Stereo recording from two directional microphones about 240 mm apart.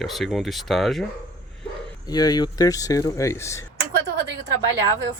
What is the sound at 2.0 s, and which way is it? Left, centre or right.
Speech, centre.